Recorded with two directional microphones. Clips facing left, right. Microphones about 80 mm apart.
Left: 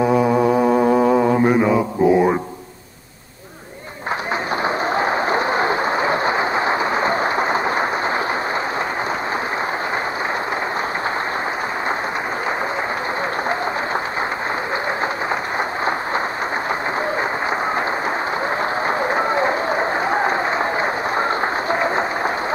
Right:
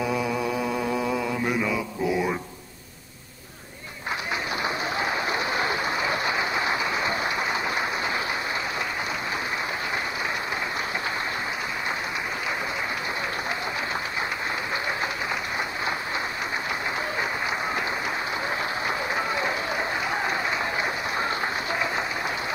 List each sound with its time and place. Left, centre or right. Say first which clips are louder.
0.0 s mantra: left 10 dB; left
4.6 s applause: left 9 dB; left
18.9 s applause: left 9 dB; left